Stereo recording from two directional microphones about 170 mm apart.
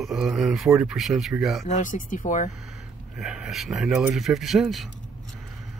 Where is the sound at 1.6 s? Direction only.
50° left (ahead or behind).